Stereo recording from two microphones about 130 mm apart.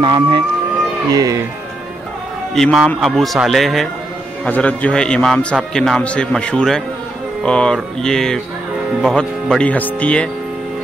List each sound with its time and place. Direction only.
0.0 s speech: 40° right (ahead or behind)
1.1 s speech: 25° right (ahead or behind)
2.5 s a man's voice: centre (ahead or behind)